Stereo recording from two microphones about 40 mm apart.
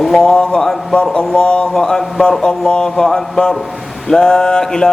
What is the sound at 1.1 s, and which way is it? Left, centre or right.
Mantra, centre.